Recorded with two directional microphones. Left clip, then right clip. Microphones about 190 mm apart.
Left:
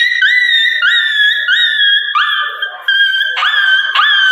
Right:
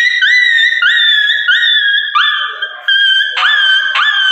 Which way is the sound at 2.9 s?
5° right (ahead or behind).